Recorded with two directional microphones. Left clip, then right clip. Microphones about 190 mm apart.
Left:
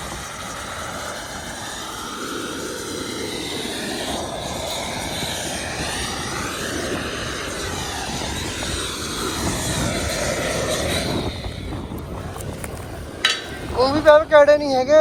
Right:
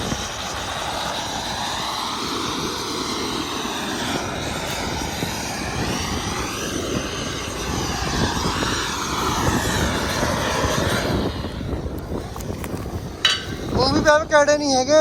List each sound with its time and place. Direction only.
8.6 s vehicle: centre (ahead or behind)
13.7 s speech: 15° right (ahead or behind)